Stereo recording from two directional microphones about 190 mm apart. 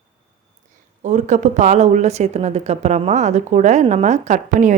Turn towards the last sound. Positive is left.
turn(degrees=-40)  # may be behind; listen again after turning